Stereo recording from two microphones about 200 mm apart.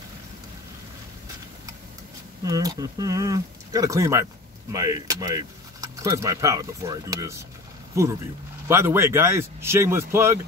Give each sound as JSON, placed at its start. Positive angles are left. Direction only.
{"t": 2.4, "sound": "speech", "side_deg": -20}